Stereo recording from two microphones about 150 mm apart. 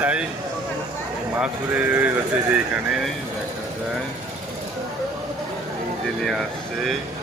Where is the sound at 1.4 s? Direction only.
10° right (ahead or behind).